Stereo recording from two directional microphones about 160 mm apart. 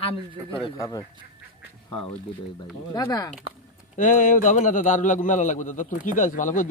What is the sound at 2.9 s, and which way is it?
Speech, 25° left (ahead or behind).